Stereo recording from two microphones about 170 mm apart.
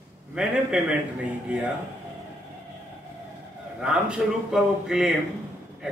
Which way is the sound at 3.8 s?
5° right (ahead or behind).